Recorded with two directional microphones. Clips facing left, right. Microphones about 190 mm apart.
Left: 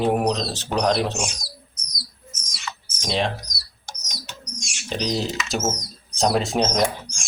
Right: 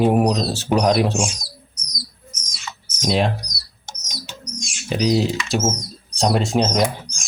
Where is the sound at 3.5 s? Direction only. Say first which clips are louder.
Right 1 dB; 25° right (ahead or behind).